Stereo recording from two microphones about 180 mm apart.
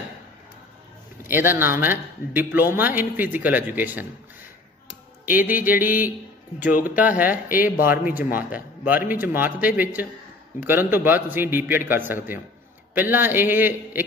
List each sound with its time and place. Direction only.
1.2 s a man's voice: 10° right (ahead or behind)
5.2 s a man's voice: 10° right (ahead or behind)
6.7 s speech: 50° left (ahead or behind)
7.0 s a man's voice: 10° right (ahead or behind)